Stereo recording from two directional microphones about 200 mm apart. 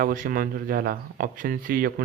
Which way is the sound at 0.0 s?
45° right (ahead or behind).